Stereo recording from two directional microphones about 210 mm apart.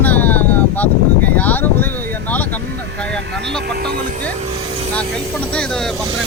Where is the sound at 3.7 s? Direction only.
50° right (ahead or behind).